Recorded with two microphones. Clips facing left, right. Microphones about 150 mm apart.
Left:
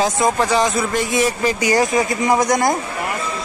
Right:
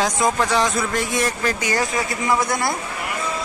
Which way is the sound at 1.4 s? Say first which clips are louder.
Left 5 dB; 15° left (ahead or behind).